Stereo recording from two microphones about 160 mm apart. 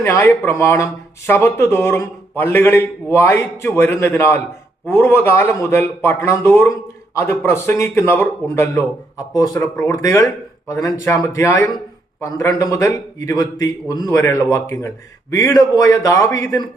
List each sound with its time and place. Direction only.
0.0 s a man's voice: 15° left (ahead or behind)